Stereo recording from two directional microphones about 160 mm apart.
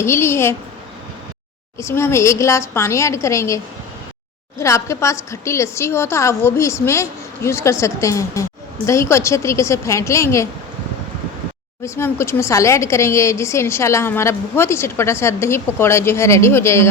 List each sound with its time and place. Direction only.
0.0 s speech: 15° left (ahead or behind)
1.8 s speech: 15° left (ahead or behind)
11.8 s speech: 15° left (ahead or behind)